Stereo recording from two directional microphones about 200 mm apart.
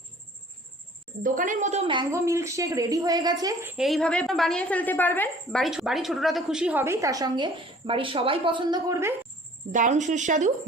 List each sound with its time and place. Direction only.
1.2 s a woman's voice: 40° right (ahead or behind); by 3.8 s 15° right (ahead or behind)
3.8 s a woman's voice: centre (ahead or behind); by 9.1 s 15° right (ahead or behind)
9.7 s speech: 40° right (ahead or behind)